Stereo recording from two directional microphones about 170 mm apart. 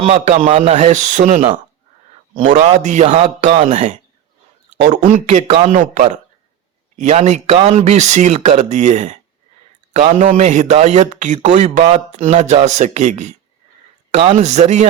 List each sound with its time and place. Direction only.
0.0 s a man's voice: 40° right (ahead or behind)
2.4 s a man's voice: 45° right (ahead or behind)